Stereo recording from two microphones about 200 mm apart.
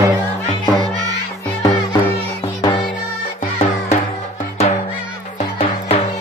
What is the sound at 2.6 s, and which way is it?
Music, 20° left (ahead or behind).